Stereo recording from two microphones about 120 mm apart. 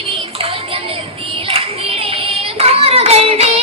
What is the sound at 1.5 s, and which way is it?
Child singing, 55° right (ahead or behind).